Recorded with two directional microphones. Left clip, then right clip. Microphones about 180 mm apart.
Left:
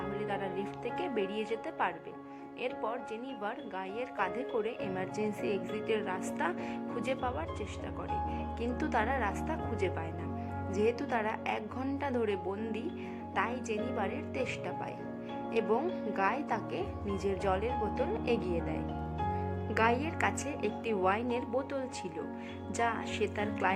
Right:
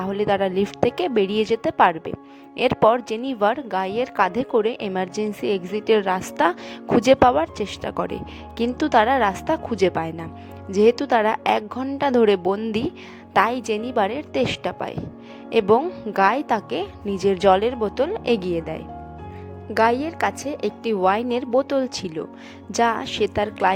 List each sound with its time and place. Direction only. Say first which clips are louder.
0.1 s a woman's voice: right 18 dB; 55° right (ahead or behind)
16.1 s a woman's voice: right 15 dB; 45° right (ahead or behind)